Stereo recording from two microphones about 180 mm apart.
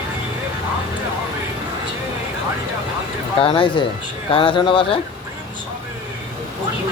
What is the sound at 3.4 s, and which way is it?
Speech, 30° left (ahead or behind).